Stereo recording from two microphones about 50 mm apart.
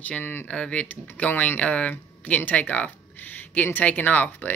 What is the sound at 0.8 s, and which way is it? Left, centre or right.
Speech, left.